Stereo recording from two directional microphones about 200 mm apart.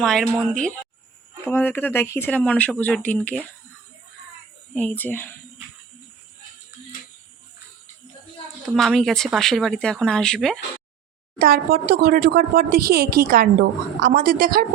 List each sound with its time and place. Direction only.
0.0 s speech: centre (ahead or behind)
1.5 s speech: 10° left (ahead or behind)
4.7 s speech: 5° left (ahead or behind)
8.7 s speech: centre (ahead or behind)
11.3 s speech: 50° right (ahead or behind)